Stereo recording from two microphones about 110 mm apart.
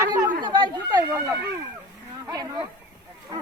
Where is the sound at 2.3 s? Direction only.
35° right (ahead or behind).